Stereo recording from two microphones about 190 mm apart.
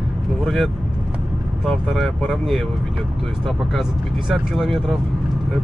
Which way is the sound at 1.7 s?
Centre (ahead or behind).